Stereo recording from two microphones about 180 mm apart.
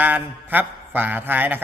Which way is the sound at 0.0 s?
10° right (ahead or behind).